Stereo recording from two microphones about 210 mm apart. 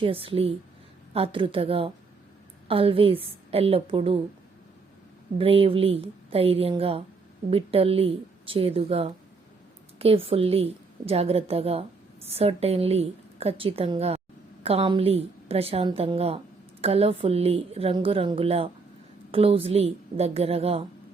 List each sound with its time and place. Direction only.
0.0 s a woman's voice: 25° right (ahead or behind)
5.4 s a woman's voice: 25° right (ahead or behind)